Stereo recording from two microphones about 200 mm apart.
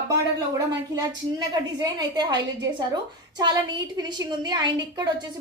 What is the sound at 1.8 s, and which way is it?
A woman's voice, 20° right (ahead or behind).